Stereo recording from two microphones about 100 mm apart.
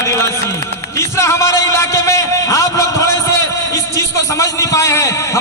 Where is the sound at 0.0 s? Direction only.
30° left (ahead or behind).